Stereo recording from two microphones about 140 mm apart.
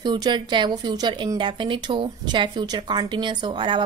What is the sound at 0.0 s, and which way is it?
A woman's voice, 30° right (ahead or behind).